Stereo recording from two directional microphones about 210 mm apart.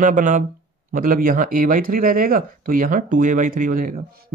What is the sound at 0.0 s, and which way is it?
Speech, 35° right (ahead or behind).